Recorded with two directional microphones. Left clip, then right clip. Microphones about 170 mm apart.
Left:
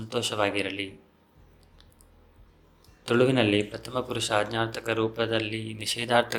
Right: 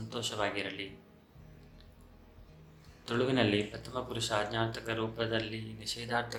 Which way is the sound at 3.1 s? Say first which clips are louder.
Left 7 dB; 40° left (ahead or behind).